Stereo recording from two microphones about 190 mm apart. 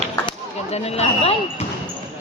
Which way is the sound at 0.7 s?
35° left (ahead or behind).